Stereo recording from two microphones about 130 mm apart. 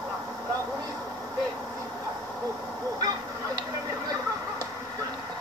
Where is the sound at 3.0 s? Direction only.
30° right (ahead or behind).